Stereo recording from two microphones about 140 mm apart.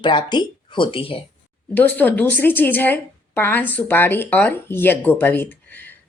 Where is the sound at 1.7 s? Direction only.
10° left (ahead or behind).